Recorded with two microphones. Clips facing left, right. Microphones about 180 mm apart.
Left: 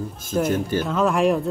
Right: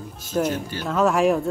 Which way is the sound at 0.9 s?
Centre (ahead or behind).